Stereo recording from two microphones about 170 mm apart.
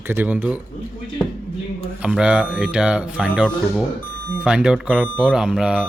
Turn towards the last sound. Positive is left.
turn(degrees=-5)  # may be behind; listen again after turning